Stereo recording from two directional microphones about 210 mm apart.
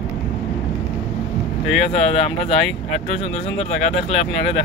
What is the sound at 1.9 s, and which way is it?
Speech, 30° left (ahead or behind).